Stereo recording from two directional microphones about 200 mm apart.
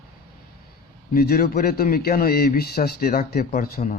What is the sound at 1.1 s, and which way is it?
A man's voice, 50° left (ahead or behind).